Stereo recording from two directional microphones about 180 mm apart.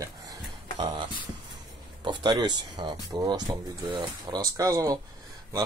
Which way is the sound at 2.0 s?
25° right (ahead or behind).